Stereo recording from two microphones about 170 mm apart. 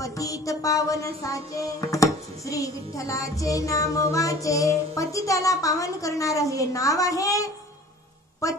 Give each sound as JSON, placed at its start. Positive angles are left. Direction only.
{"t": 0.0, "sound": "music", "side_deg": 20}